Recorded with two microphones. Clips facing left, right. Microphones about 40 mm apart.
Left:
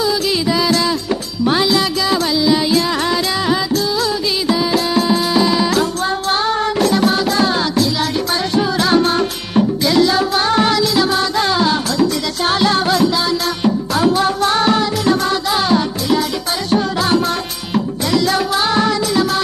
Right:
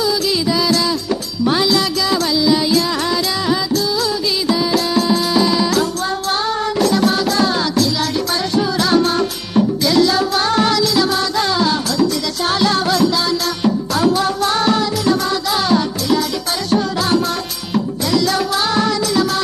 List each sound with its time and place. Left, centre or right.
0.0 s music: left
1.5 s music: left
4.4 s music: left
15.4 s music: left
16.7 s music: left